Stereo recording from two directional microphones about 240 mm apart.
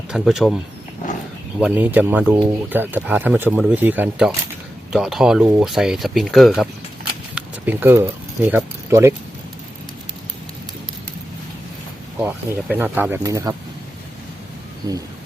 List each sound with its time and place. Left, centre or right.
0.1 s speech: centre
12.2 s speech: centre
14.8 s speech: centre